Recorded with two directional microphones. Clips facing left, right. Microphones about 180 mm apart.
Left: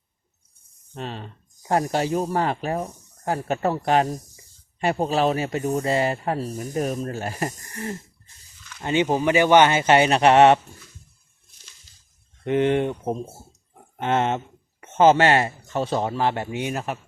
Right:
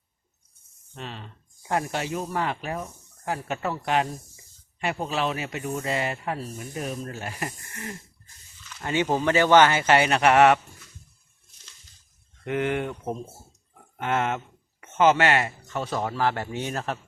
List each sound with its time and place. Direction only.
0.9 s speech: 40° left (ahead or behind)
8.8 s speech: 20° left (ahead or behind)
12.5 s speech: 25° left (ahead or behind)